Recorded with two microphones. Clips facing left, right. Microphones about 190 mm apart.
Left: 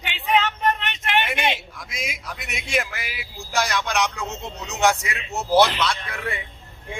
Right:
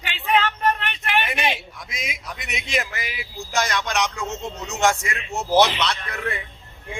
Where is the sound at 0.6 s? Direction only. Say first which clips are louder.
Even; 20° left (ahead or behind).